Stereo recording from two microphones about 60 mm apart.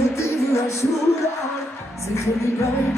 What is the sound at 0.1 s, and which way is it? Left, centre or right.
Music, left.